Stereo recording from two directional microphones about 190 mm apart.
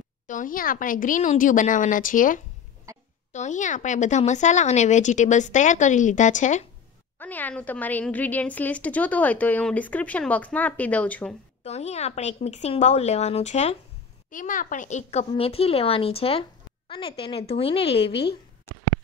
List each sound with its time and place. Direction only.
0.3 s speech: 45° left (ahead or behind)
7.2 s a woman's voice: 10° left (ahead or behind)
11.6 s speech: 35° left (ahead or behind)